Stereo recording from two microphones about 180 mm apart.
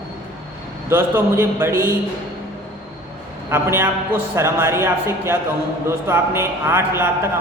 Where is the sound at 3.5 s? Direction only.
15° right (ahead or behind).